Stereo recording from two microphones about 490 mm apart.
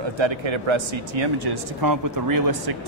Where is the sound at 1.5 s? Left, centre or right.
Right.